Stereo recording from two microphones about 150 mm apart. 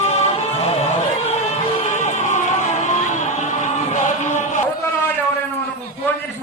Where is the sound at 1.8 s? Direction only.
55° left (ahead or behind).